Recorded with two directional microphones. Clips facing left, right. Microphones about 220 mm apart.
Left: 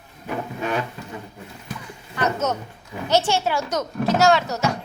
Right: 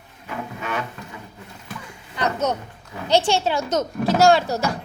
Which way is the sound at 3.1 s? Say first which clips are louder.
Right 1 dB; 15° right (ahead or behind).